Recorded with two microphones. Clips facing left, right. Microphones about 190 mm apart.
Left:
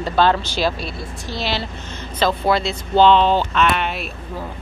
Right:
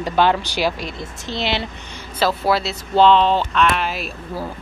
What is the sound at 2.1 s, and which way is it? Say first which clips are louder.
Speech: even; 5° right (ahead or behind).